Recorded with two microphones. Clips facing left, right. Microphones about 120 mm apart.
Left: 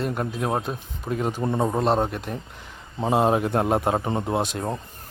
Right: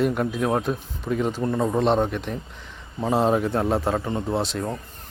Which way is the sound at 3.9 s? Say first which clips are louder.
Left 1 dB; 30° left (ahead or behind).